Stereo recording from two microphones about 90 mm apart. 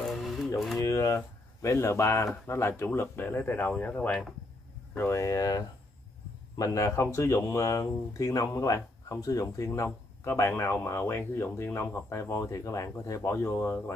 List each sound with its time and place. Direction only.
0.0 s music: centre (ahead or behind)
0.7 s a sound: 35° left (ahead or behind)
2.4 s speech: 30° left (ahead or behind)
4.9 s speech: 30° left (ahead or behind)
9.8 s speech: 25° left (ahead or behind)